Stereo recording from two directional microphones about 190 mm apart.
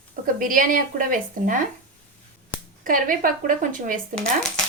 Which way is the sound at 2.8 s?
45° right (ahead or behind).